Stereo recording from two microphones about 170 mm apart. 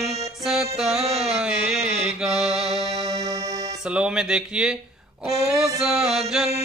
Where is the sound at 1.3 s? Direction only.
5° right (ahead or behind).